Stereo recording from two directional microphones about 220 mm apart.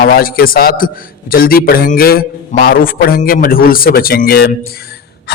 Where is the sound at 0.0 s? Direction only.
40° left (ahead or behind).